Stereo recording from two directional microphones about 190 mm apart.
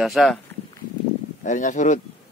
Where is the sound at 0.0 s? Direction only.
Centre (ahead or behind).